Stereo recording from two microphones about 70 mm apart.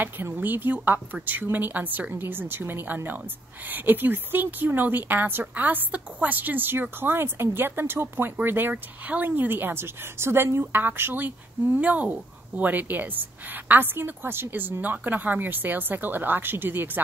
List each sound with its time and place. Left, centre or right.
0.0 s speech: right